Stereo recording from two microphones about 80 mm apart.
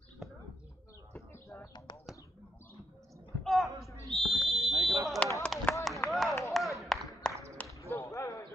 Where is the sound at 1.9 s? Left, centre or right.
Left.